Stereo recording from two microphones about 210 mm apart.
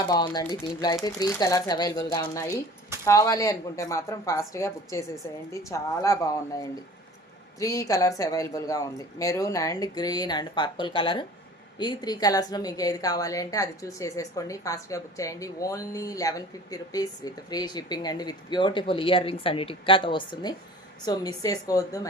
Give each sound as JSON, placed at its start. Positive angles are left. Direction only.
{"t": 0.1, "sound": "a woman's voice", "side_deg": 20}